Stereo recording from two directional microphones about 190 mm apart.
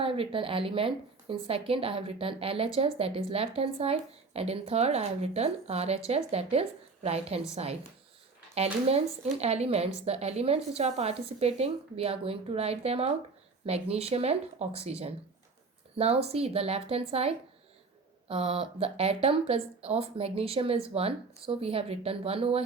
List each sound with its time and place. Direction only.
0.0 s a woman's voice: 30° right (ahead or behind)